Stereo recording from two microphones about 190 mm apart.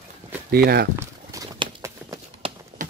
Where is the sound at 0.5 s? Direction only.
55° right (ahead or behind).